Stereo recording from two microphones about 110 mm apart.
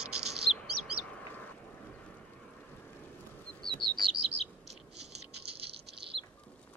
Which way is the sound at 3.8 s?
45° right (ahead or behind).